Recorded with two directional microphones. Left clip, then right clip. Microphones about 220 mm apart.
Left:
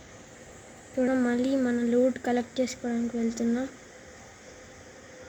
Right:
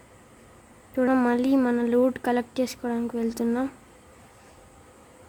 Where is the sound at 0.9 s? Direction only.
40° right (ahead or behind).